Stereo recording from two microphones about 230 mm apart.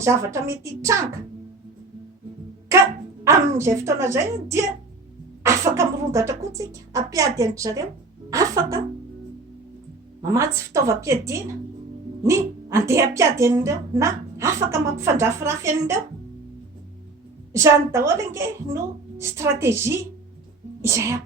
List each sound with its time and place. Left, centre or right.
0.0 s speech: centre
3.2 s speech: centre
10.2 s speech: centre
17.5 s speech: centre